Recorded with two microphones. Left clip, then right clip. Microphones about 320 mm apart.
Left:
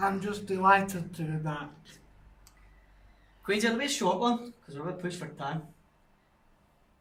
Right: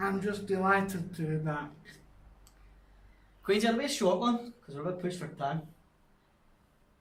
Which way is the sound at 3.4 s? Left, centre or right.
Centre.